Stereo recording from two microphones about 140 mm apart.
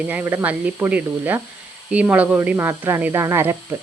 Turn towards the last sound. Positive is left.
turn(degrees=-20)  # may be behind; listen again after turning